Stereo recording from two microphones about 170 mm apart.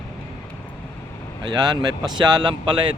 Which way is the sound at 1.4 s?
25° right (ahead or behind).